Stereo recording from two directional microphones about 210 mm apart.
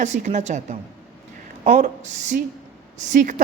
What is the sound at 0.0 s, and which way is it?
A woman's voice, 35° right (ahead or behind).